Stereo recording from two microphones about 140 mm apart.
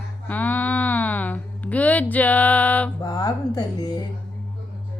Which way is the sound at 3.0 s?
30° left (ahead or behind).